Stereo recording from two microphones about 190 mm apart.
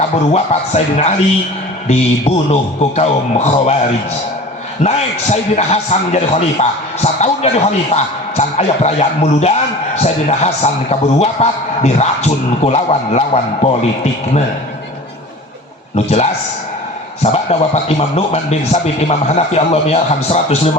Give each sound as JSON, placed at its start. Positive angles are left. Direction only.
{"t": 0.0, "sound": "a man's voice", "side_deg": 35}
{"t": 4.8, "sound": "a man's voice", "side_deg": 35}
{"t": 16.0, "sound": "a man's voice", "side_deg": 35}
{"t": 17.3, "sound": "a man's voice", "side_deg": 30}